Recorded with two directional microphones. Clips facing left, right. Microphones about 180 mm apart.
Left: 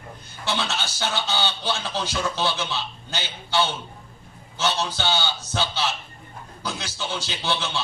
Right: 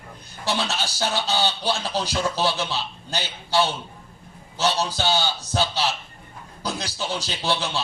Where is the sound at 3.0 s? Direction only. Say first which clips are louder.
Right 3 dB; 35° right (ahead or behind).